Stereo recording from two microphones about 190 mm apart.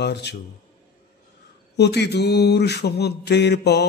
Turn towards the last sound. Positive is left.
turn(degrees=60)  # may be behind; listen again after turning